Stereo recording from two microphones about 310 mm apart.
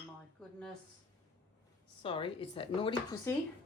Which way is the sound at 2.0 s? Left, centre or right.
Centre.